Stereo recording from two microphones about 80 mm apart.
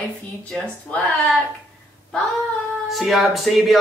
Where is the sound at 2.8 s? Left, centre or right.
Centre.